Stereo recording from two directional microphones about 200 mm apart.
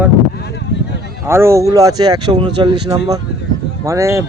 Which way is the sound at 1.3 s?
15° right (ahead or behind).